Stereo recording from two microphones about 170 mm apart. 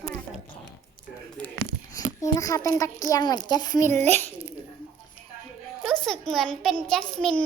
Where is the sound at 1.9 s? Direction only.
20° left (ahead or behind).